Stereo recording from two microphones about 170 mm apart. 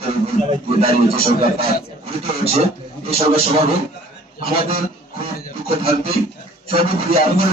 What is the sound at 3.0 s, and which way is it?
Speech, 35° right (ahead or behind).